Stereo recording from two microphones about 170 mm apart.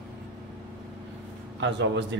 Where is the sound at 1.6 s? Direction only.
90° right.